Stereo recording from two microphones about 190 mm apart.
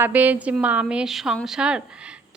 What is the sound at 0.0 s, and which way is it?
A woman's voice, 10° right (ahead or behind).